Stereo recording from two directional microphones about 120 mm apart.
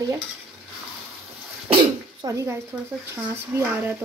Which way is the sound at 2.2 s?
35° right (ahead or behind).